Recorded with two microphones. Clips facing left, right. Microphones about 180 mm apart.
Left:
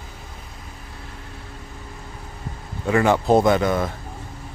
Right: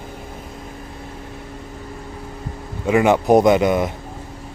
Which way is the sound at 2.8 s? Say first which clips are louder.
Right 3 dB; 15° right (ahead or behind).